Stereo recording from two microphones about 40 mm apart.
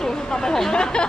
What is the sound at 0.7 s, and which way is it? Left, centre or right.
Speech, left.